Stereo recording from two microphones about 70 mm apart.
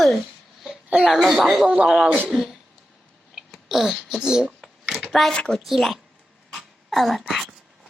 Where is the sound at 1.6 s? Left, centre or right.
Centre.